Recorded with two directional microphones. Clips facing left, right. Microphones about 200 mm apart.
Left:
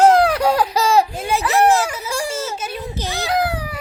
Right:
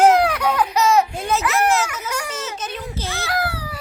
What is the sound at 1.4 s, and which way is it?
Speech, 30° left (ahead or behind).